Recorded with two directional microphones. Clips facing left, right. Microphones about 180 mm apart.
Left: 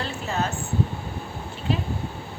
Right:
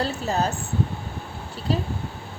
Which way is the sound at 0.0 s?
35° right (ahead or behind).